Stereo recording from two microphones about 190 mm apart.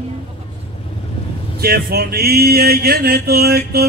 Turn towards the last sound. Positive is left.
turn(degrees=-55)  # may be behind; listen again after turning